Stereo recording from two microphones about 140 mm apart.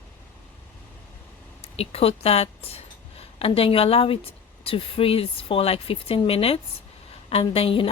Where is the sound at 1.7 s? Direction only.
45° left (ahead or behind).